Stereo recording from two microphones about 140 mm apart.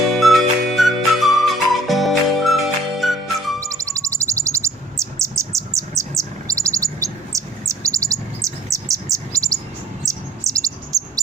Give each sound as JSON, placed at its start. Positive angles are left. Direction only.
{"t": 0.1, "sound": "music", "side_deg": 0}
{"t": 3.6, "sound": "bird", "side_deg": -25}